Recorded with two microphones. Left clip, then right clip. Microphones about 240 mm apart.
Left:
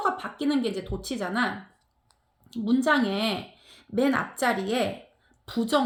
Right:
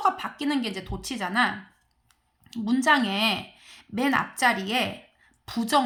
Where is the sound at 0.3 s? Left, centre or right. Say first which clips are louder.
Left 1 dB; right.